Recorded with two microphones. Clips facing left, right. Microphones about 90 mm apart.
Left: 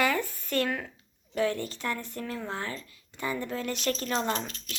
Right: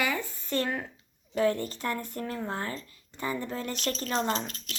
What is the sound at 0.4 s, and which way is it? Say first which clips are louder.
Speech: right 1 dB; 30° right (ahead or behind).